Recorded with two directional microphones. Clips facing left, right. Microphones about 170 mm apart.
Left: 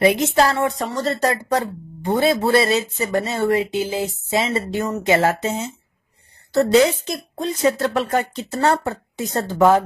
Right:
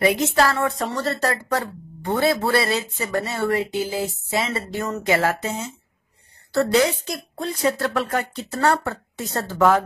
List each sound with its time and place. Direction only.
0.0 s a woman's voice: 20° left (ahead or behind)
0.7 s speech: centre (ahead or behind)
1.0 s a woman's voice: 20° left (ahead or behind)